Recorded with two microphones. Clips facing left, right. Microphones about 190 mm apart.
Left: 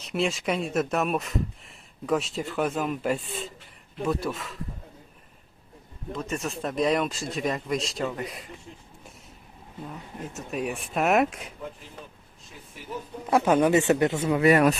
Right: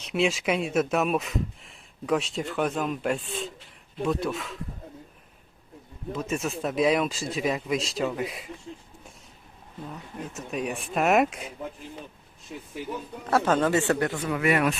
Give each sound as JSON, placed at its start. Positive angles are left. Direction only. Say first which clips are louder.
{"t": 0.0, "sound": "speech", "louder": "right 2 dB", "side_deg": 0}
{"t": 6.1, "sound": "speech", "louder": "right 2 dB", "side_deg": -5}
{"t": 10.3, "sound": "speech", "louder": "even", "side_deg": 0}
{"t": 13.3, "sound": "speech", "louder": "left 2 dB", "side_deg": 15}
{"t": 14.5, "sound": "speech", "louder": "left 4 dB", "side_deg": 40}